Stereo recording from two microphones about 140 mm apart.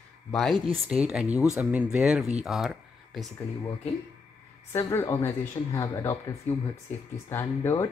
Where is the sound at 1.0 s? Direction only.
10° right (ahead or behind).